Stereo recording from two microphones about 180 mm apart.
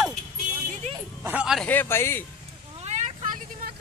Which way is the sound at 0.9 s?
35° right (ahead or behind).